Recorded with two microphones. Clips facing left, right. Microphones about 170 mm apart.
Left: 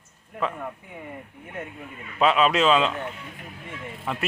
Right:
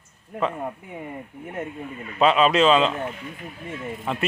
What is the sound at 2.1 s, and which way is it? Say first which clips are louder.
Speech: right 2 dB; centre (ahead or behind).